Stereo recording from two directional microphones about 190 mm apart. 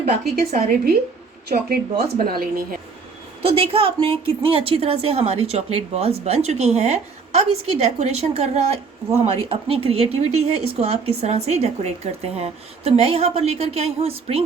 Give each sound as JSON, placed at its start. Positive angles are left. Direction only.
{"t": 0.0, "sound": "a woman's voice", "side_deg": -55}
{"t": 3.4, "sound": "speech", "side_deg": -30}